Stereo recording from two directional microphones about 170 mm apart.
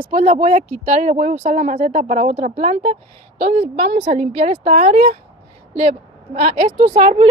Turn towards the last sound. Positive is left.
turn(degrees=-35)  # may be behind; listen again after turning